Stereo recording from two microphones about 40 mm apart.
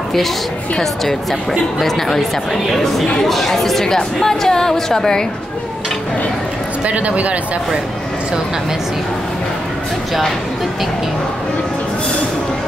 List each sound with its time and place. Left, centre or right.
1.8 s speech: centre
6.9 s speech: right